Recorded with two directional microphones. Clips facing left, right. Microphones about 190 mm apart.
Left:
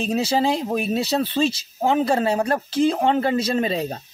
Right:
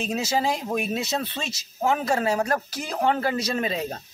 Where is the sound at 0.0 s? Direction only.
35° left (ahead or behind).